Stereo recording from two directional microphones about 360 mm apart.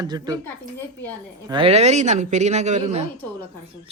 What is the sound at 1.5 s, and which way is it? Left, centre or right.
A man's voice, centre.